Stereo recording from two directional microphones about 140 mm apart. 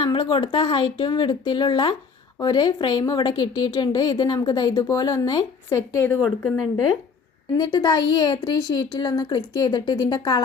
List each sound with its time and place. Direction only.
0.0 s a woman's voice: 35° left (ahead or behind); by 6.1 s 20° left (ahead or behind)
7.5 s a woman's voice: 30° left (ahead or behind)